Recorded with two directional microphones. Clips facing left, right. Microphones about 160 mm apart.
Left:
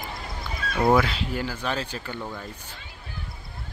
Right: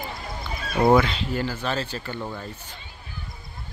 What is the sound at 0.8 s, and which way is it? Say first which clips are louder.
Speech: right 2 dB; 5° left (ahead or behind).